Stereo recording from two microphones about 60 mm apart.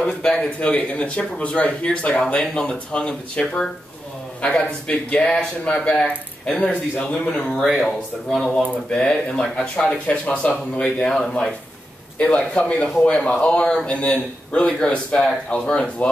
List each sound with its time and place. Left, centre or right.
0.0 s speech: centre
0.6 s speech: left; by 8.5 s centre
8.5 s speech: centre